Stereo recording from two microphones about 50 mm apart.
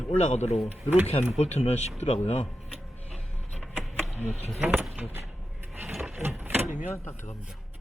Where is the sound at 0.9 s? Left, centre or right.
Right.